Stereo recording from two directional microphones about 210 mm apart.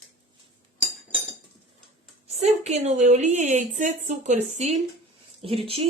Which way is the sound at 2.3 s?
30° right (ahead or behind).